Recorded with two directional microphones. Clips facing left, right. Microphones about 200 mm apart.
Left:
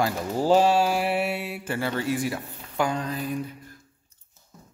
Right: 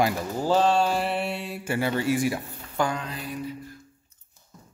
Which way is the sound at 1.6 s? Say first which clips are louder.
Right 5 dB; 10° right (ahead or behind).